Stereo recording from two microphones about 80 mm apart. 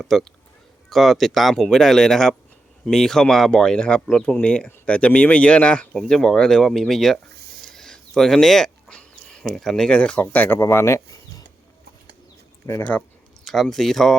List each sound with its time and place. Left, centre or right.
0.0 s speech: centre
7.7 s a sound: centre
9.5 s speech: centre; by 10.6 s left
10.6 s speech: left
13.4 s speech: centre